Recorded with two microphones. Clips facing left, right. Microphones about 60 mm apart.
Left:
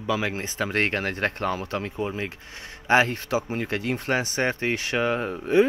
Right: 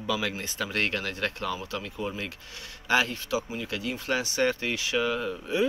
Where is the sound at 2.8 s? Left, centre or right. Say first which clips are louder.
Left 5 dB; left.